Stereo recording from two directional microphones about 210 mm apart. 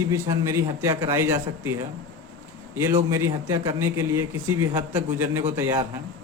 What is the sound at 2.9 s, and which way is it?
A man's voice, 15° right (ahead or behind).